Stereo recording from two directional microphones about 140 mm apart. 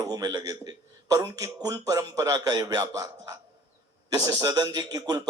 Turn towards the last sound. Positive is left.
turn(degrees=-30)  # may be behind; listen again after turning